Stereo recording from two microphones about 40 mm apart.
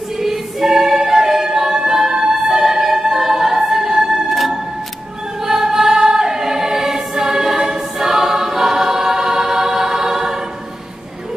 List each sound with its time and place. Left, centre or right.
0.2 s choir: centre
1.0 s music: centre
5.4 s choir: centre